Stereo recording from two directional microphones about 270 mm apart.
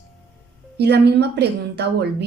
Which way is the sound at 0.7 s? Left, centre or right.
Right.